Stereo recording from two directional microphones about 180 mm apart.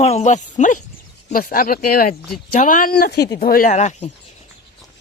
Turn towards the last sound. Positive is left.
turn(degrees=40)  # may be behind; listen again after turning